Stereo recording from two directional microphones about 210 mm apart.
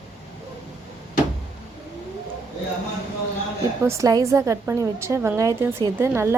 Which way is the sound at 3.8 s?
15° right (ahead or behind).